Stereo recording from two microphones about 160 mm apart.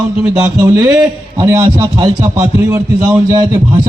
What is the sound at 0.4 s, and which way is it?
Speech, 25° right (ahead or behind).